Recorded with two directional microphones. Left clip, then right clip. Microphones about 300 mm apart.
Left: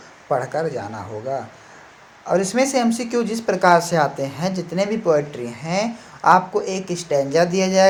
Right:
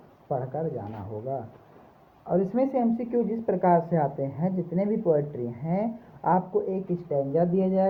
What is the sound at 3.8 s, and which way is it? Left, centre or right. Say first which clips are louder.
Speech: left 7 dB; centre.